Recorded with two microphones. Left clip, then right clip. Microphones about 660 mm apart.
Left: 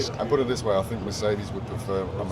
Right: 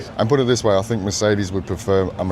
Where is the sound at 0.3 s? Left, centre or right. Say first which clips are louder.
Right 7 dB; right.